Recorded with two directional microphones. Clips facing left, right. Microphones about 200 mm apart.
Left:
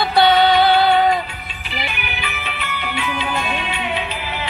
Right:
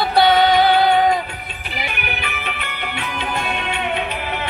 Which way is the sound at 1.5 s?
55° right (ahead or behind).